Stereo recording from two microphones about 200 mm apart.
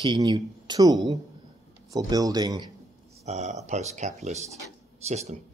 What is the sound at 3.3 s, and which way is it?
Speech, 35° right (ahead or behind).